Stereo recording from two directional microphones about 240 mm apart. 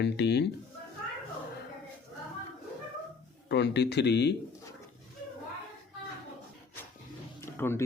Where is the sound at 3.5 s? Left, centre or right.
Left.